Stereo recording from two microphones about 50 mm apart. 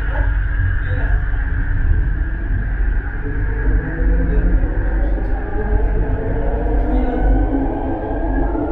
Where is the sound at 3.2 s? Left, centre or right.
Centre.